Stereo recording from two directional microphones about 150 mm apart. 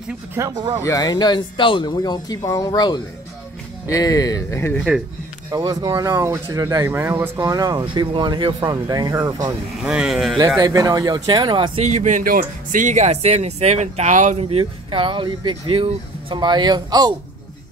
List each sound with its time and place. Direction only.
0.3 s speech: 25° right (ahead or behind)
0.8 s speech: 25° left (ahead or behind)
4.7 s speech: centre (ahead or behind)
5.5 s speech: 25° right (ahead or behind)
9.8 s speech: 5° right (ahead or behind)
10.6 s speech: 25° right (ahead or behind)
11.8 s speech: 50° right (ahead or behind); by 17.1 s 25° right (ahead or behind)